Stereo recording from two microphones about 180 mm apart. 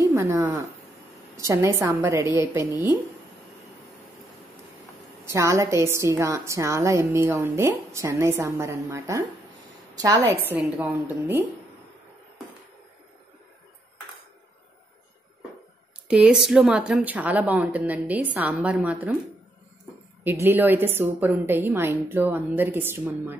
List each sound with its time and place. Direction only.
0.1 s a woman's voice: 15° right (ahead or behind)
5.2 s a woman's voice: 15° right (ahead or behind)
10.5 s a woman's voice: 10° right (ahead or behind)
16.1 s a woman's voice: 5° right (ahead or behind)
20.2 s a woman's voice: 10° right (ahead or behind)